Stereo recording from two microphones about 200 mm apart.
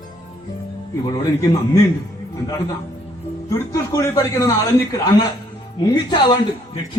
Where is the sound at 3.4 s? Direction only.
15° left (ahead or behind).